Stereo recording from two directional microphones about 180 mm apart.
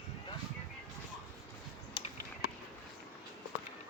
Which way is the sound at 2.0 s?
30° left (ahead or behind).